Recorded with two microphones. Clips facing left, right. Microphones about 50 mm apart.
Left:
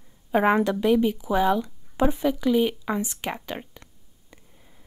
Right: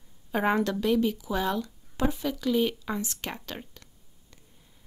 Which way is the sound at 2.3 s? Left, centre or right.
Centre.